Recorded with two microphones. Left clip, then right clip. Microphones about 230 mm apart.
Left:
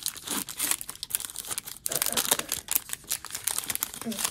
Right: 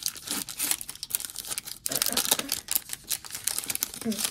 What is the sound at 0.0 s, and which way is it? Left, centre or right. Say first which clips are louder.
Crumpling: even; centre.